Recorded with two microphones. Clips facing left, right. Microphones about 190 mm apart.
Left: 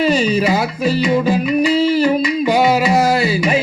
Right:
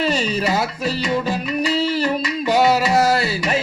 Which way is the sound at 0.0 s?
5° left (ahead or behind).